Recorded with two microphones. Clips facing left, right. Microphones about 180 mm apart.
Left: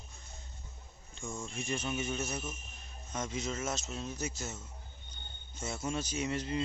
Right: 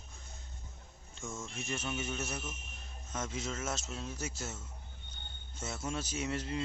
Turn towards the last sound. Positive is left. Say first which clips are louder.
# left 2 dB
turn(degrees=0)  # may be behind; listen again after turning